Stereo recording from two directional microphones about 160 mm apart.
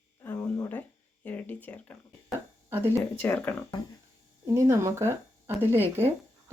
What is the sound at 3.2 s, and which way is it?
Speech, 10° left (ahead or behind).